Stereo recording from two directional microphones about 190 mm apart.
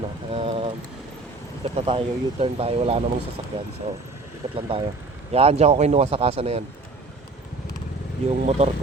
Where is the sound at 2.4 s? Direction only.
30° right (ahead or behind).